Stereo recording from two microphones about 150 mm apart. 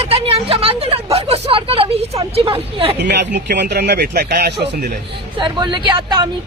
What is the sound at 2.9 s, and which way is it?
Speech, 90° right.